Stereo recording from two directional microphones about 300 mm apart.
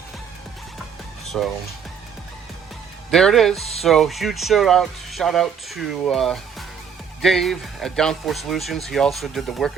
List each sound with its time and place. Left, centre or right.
1.2 s music: centre
3.1 s speech: centre
3.6 s speech: left
3.8 s speech: centre